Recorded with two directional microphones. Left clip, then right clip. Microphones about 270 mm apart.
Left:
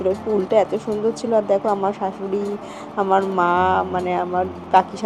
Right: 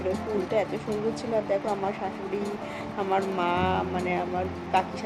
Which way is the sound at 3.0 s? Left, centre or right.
Centre.